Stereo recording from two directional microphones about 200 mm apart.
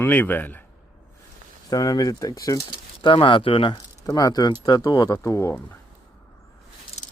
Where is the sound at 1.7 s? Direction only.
20° left (ahead or behind).